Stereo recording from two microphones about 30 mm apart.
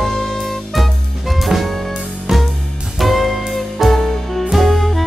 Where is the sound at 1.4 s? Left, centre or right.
Centre.